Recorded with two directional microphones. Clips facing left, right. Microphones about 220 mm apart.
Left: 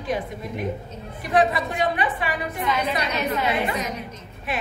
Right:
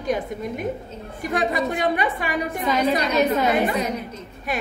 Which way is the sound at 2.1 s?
40° right (ahead or behind).